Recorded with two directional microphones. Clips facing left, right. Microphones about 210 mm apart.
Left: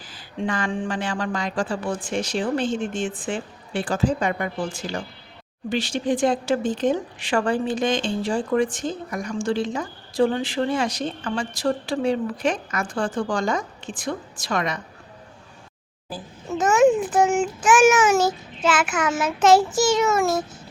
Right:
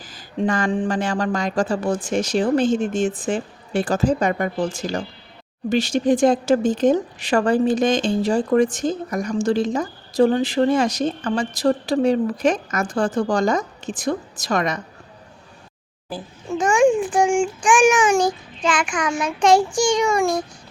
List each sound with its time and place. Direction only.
0.1 s speech: 40° right (ahead or behind)
16.5 s a child's voice: 5° left (ahead or behind)